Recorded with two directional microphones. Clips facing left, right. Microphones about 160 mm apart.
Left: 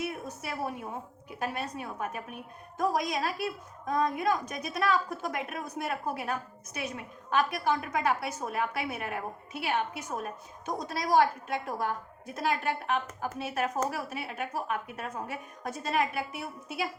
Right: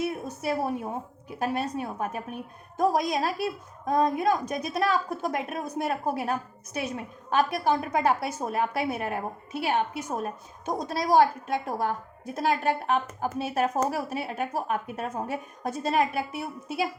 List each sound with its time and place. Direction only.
0.0 s a woman's voice: 30° right (ahead or behind)